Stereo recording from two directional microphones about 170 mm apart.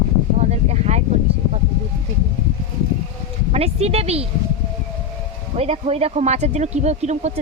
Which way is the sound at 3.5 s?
35° right (ahead or behind).